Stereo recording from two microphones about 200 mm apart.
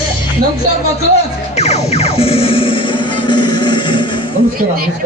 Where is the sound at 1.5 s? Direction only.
35° left (ahead or behind).